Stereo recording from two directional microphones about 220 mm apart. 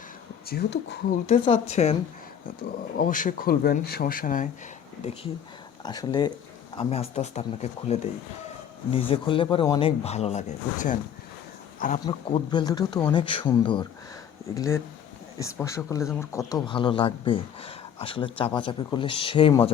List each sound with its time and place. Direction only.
0.4 s speech: 45° left (ahead or behind)
1.3 s speech: 30° left (ahead or behind)
3.0 s speech: 35° left (ahead or behind)
5.8 s speech: 20° left (ahead or behind); by 10.9 s 35° left (ahead or behind)
12.0 s speech: 20° left (ahead or behind)